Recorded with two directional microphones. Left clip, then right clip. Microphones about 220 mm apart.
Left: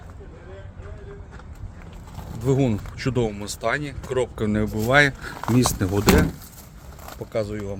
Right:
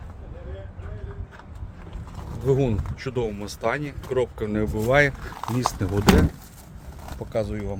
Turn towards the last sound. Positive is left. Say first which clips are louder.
# left 1 dB
turn(degrees=5)  # may be behind; listen again after turning